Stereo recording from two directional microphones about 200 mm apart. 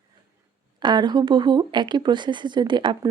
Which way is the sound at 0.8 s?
20° right (ahead or behind).